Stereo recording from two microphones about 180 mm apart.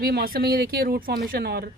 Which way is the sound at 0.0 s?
60° right (ahead or behind).